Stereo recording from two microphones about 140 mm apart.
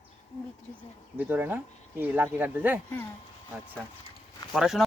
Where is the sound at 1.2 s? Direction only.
15° right (ahead or behind).